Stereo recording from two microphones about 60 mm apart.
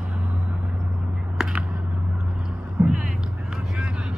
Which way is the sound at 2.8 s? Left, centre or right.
Centre.